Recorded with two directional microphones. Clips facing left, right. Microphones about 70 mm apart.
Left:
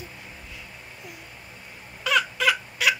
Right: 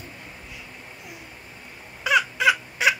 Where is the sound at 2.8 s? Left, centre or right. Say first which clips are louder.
Right 2 dB; right.